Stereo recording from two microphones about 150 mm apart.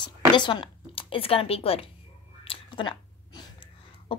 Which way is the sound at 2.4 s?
30° left (ahead or behind).